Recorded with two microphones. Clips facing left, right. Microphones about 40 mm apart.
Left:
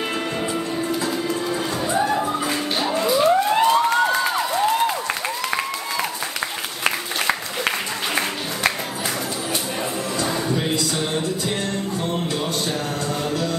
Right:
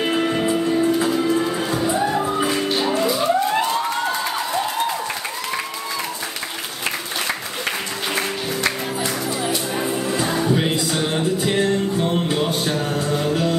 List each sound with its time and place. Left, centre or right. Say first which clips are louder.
0.0 s music: right 5 dB; centre
2.0 s music: right 2 dB; centre
9.8 s music: right 3 dB; centre
10.5 s music: right 3 dB; right